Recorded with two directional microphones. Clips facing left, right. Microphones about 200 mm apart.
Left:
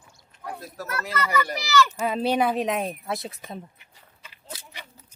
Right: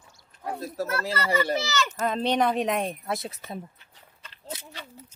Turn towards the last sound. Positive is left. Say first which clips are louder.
# even
turn(degrees=10)  # may be behind; listen again after turning